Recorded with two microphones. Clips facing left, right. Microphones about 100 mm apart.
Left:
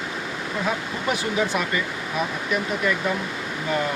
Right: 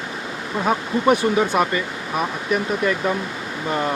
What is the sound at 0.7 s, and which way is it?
Speech, 45° right (ahead or behind).